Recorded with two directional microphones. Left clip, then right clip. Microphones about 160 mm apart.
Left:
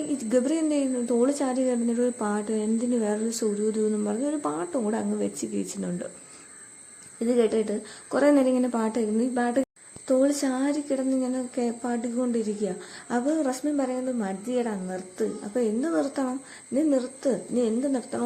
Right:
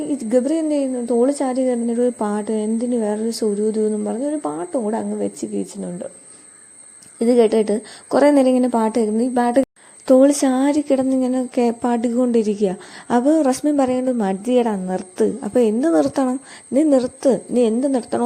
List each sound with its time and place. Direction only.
0.0 s a woman's voice: 25° right (ahead or behind)
7.2 s a woman's voice: 40° right (ahead or behind)